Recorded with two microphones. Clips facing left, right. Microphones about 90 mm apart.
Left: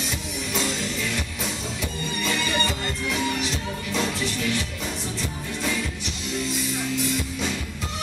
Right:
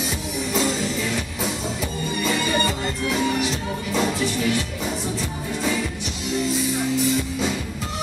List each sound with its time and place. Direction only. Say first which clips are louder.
0.5 s music: right 5 dB; 5° right (ahead or behind)